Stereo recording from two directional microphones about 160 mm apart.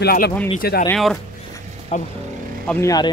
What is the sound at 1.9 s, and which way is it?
Speech, 50° left (ahead or behind).